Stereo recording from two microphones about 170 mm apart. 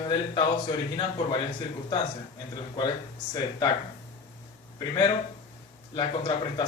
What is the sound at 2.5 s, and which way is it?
Speech, 25° left (ahead or behind).